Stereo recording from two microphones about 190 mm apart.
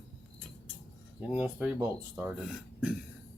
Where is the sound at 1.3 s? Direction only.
5° right (ahead or behind).